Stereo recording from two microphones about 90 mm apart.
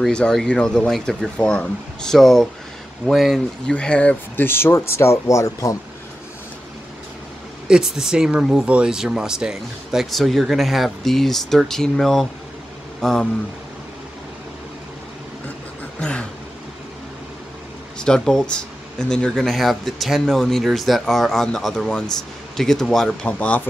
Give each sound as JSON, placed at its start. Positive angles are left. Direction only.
{"t": 0.0, "sound": "speech", "side_deg": 10}
{"t": 3.7, "sound": "speech", "side_deg": 10}
{"t": 7.6, "sound": "speech", "side_deg": -5}
{"t": 16.0, "sound": "a sound", "side_deg": 10}
{"t": 17.9, "sound": "speech", "side_deg": 10}